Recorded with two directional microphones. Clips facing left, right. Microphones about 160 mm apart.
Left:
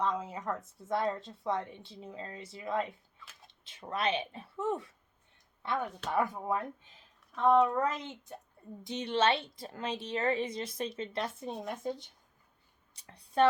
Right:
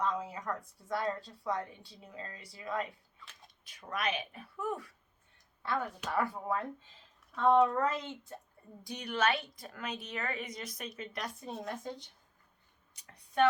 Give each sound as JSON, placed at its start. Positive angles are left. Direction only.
{"t": 0.0, "sound": "speech", "side_deg": 20}
{"t": 12.9, "sound": "speech", "side_deg": 30}